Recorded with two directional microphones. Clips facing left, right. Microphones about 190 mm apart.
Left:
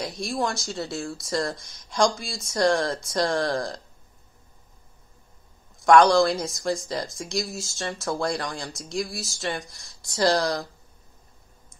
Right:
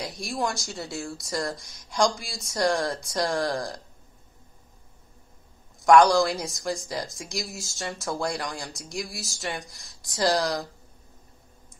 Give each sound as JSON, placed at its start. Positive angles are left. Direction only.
{"t": 0.0, "sound": "speech", "side_deg": -15}
{"t": 5.8, "sound": "a sound", "side_deg": -15}
{"t": 6.1, "sound": "speech", "side_deg": -15}